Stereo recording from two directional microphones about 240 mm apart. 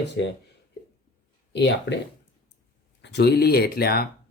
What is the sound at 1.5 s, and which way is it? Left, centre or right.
Speech, left.